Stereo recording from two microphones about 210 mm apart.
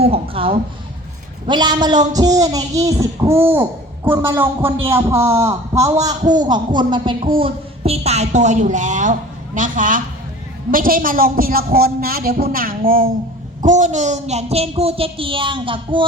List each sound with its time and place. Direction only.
0.0 s a woman's voice: 25° right (ahead or behind)